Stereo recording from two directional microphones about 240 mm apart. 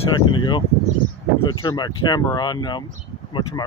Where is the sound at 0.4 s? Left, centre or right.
Centre.